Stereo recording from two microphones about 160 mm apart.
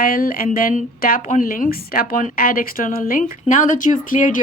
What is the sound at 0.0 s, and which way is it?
A woman's voice, 65° left (ahead or behind).